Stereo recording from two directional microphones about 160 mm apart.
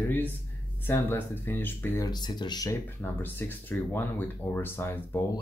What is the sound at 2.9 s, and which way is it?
Speech, 10° left (ahead or behind).